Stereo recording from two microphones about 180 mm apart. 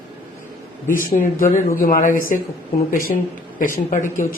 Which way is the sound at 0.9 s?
50° left (ahead or behind).